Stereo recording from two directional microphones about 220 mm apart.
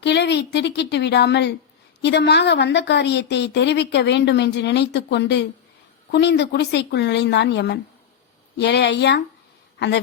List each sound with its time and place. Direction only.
0.0 s a woman's voice: 50° left (ahead or behind)